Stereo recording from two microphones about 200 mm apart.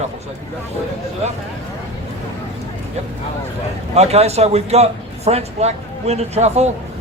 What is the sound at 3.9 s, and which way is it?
Speech, 30° right (ahead or behind).